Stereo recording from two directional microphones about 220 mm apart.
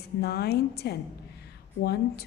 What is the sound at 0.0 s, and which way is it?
A woman's voice, 45° left (ahead or behind).